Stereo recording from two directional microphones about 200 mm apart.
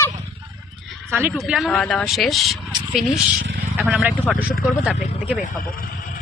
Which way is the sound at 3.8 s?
5° right (ahead or behind).